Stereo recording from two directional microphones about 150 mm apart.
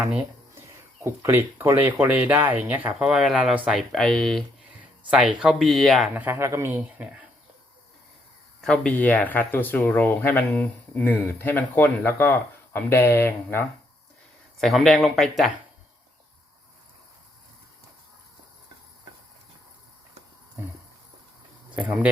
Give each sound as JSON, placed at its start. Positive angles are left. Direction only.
{"t": 1.0, "sound": "speech", "side_deg": -15}
{"t": 6.1, "sound": "speech", "side_deg": -15}
{"t": 8.6, "sound": "speech", "side_deg": 5}
{"t": 14.6, "sound": "speech", "side_deg": 0}
{"t": 21.8, "sound": "speech", "side_deg": -10}